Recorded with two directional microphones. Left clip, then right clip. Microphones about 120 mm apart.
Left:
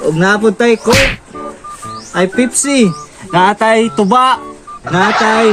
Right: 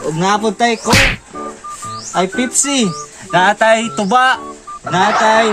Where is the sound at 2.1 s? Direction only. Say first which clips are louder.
Left 3 dB; 10° left (ahead or behind).